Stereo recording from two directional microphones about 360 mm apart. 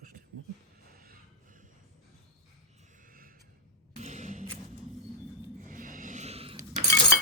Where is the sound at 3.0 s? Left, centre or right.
Right.